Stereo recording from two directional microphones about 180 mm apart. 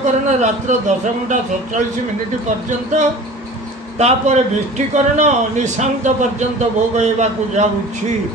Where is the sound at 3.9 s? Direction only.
40° right (ahead or behind).